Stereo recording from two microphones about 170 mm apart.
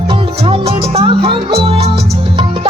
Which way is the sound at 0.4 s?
30° right (ahead or behind).